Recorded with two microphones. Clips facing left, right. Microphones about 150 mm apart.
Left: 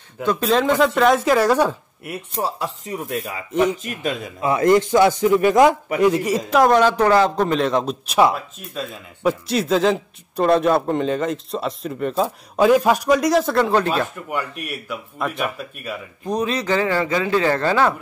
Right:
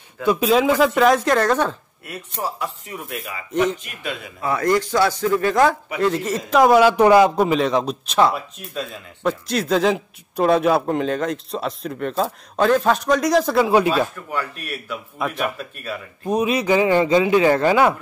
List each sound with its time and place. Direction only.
0.2 s speech: 10° right (ahead or behind); by 1.8 s 10° left (ahead or behind)
2.0 s speech: 30° left (ahead or behind)
4.4 s speech: 20° left (ahead or behind)
6.5 s speech: 5° right (ahead or behind)
14.3 s speech: 15° left (ahead or behind)
15.1 s speech: centre (ahead or behind)
16.3 s speech: 10° right (ahead or behind)